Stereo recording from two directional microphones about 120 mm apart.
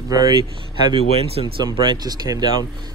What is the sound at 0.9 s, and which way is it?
Speech, 55° right (ahead or behind).